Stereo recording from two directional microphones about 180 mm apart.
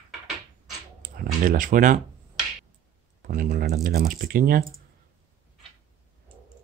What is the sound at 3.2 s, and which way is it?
Speech, 50° right (ahead or behind).